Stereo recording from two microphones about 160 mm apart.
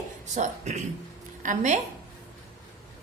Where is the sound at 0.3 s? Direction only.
50° right (ahead or behind).